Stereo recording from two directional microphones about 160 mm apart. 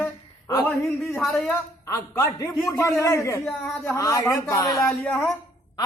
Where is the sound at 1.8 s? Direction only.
20° left (ahead or behind).